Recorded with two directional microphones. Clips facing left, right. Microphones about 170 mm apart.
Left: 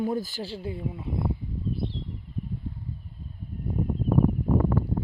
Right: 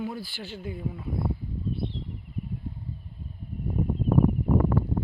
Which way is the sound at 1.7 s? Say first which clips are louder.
Left 1 dB; centre (ahead or behind).